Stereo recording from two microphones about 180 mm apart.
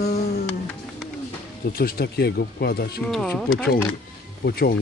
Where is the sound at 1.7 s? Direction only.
55° left (ahead or behind).